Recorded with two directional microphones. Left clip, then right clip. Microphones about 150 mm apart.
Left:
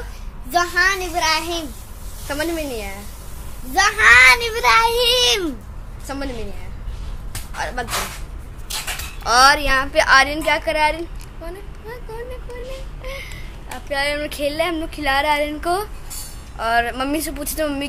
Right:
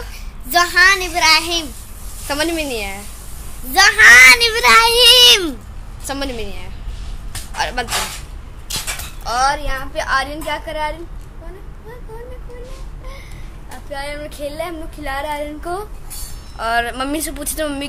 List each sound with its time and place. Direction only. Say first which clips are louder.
0.5 s a child's voice: right 5 dB; 10° left (ahead or behind)
2.2 s a woman's voice: right 4 dB; 30° right (ahead or behind)
3.7 s a child's voice: right 5 dB; 10° left (ahead or behind)
6.0 s a woman's voice: right 4 dB; 25° right (ahead or behind)
7.5 s speech: right 5 dB; 20° right (ahead or behind)
9.2 s a woman's voice: left 4 dB; 55° left (ahead or behind)
13.0 s a sound: left 7 dB; 45° left (ahead or behind)
13.9 s a woman's voice: left 6 dB; 45° left (ahead or behind)
15.6 s speech: left 4 dB; 25° left (ahead or behind)
16.5 s speech: even; centre (ahead or behind)